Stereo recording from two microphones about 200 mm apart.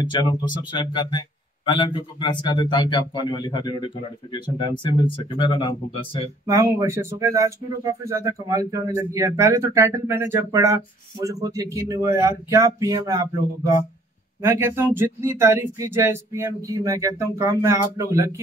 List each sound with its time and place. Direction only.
0.0 s speech: 20° left (ahead or behind)
6.4 s speech: 15° right (ahead or behind)
14.4 s speech: 10° right (ahead or behind)